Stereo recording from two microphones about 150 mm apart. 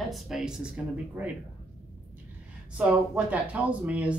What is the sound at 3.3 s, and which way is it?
Speech, 10° right (ahead or behind).